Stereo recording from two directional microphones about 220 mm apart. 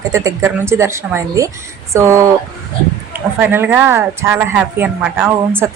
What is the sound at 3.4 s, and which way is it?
A woman's voice, 10° right (ahead or behind).